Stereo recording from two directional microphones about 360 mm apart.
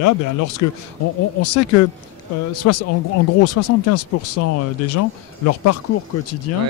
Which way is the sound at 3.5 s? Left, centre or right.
Left.